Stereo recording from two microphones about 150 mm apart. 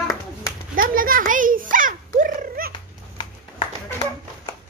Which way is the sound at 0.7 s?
70° right (ahead or behind).